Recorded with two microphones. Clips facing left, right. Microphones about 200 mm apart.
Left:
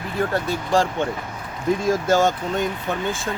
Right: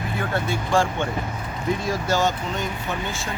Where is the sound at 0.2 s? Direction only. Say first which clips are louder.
Left 4 dB; 35° left (ahead or behind).